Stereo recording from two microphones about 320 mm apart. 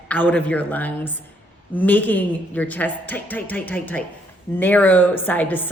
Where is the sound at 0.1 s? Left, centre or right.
Centre.